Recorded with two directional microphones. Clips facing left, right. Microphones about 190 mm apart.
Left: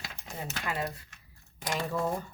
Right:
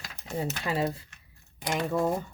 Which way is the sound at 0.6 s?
30° right (ahead or behind).